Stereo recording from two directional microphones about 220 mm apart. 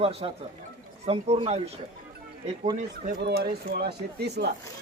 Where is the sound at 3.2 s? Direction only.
45° right (ahead or behind).